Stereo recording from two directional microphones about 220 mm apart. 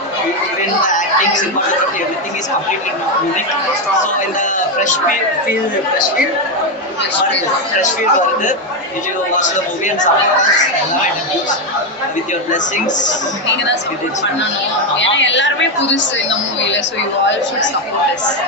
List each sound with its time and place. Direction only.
0.9 s a sound: 35° left (ahead or behind)
4.4 s a woman's voice: 35° left (ahead or behind)
9.4 s a woman's voice: 35° left (ahead or behind)
12.5 s a woman's voice: 35° left (ahead or behind)
14.9 s a woman's voice: 55° left (ahead or behind)